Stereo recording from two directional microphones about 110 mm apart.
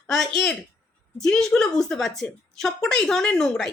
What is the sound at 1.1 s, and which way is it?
A woman's voice, 5° left (ahead or behind).